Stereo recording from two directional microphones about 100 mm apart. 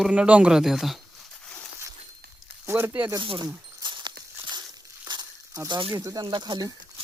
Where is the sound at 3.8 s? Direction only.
50° right (ahead or behind).